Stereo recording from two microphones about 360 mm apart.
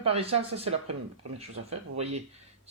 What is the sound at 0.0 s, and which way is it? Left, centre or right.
Speech, centre.